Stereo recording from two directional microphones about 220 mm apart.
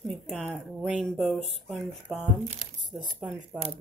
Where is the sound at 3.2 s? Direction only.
30° right (ahead or behind).